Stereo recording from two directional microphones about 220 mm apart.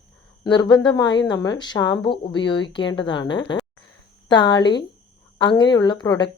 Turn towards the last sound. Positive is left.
turn(degrees=20)  # may be behind; listen again after turning